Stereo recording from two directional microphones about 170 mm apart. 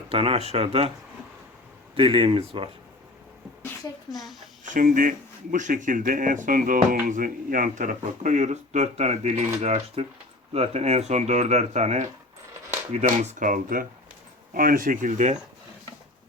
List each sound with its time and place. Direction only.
0.1 s speech: 35° right (ahead or behind)
2.0 s speech: 30° right (ahead or behind)
4.1 s speech: centre (ahead or behind)
4.7 s speech: 50° right (ahead or behind)